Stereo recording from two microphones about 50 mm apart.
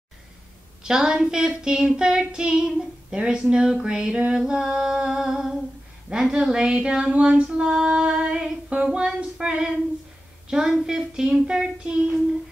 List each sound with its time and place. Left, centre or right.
0.8 s child singing: centre
6.0 s speech: centre
7.4 s child singing: centre